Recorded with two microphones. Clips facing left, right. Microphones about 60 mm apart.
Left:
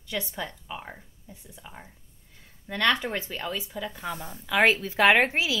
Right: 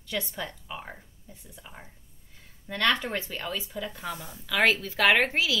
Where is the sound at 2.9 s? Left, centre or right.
Centre.